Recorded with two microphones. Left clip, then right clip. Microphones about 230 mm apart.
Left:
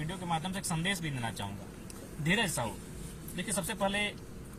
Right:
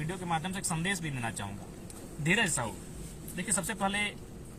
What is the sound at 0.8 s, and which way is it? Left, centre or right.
Speech, centre.